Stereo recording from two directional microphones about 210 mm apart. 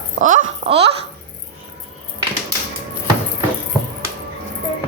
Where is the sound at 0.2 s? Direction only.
35° right (ahead or behind).